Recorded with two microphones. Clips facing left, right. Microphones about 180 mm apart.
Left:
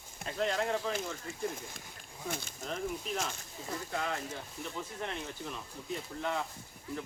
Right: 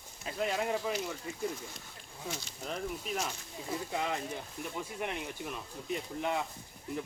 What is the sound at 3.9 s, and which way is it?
Speech, 15° right (ahead or behind).